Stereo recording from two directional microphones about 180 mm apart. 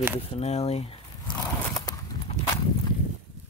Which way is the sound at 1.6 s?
20° left (ahead or behind).